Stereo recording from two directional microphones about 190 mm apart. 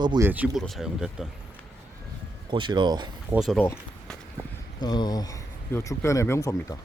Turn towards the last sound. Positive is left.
turn(degrees=15)  # may be behind; listen again after turning